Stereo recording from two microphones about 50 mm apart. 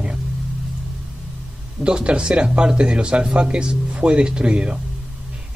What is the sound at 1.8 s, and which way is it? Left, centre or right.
Speech, centre.